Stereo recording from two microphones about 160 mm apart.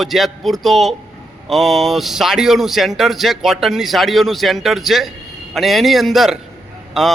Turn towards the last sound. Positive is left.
turn(degrees=0)  # may be behind; listen again after turning